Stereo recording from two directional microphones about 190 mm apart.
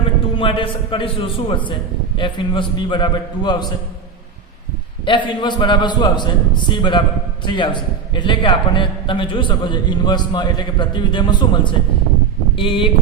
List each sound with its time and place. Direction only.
0.3 s a man's voice: 25° left (ahead or behind)
5.0 s a man's voice: 25° left (ahead or behind)